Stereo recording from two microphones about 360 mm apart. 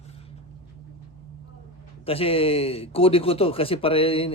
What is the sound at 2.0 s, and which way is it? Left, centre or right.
Speech, centre.